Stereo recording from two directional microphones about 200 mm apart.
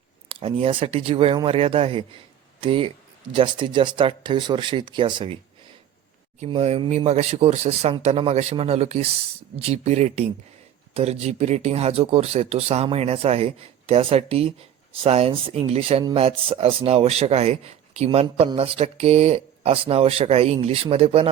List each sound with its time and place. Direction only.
0.3 s speech: 25° right (ahead or behind)
6.4 s speech: 30° right (ahead or behind)